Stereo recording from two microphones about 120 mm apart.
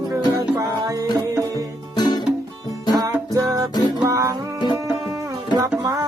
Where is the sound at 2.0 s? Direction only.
35° left (ahead or behind).